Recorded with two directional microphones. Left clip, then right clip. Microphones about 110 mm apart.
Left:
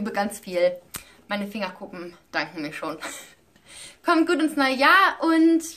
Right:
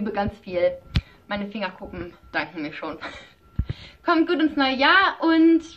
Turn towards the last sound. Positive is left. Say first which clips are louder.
# right 2 dB
turn(degrees=40)  # may be behind; listen again after turning